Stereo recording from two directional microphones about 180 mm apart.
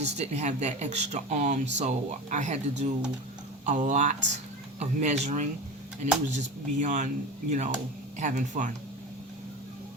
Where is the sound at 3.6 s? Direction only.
45° right (ahead or behind).